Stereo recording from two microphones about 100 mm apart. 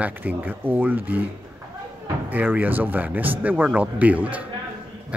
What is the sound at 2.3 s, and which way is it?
Speech, 20° right (ahead or behind).